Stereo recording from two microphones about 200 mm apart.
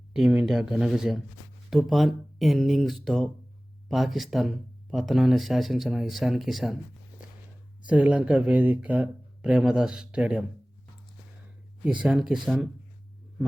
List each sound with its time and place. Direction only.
0.1 s speech: 5° right (ahead or behind)
7.9 s speech: 5° right (ahead or behind)
11.9 s speech: 5° right (ahead or behind)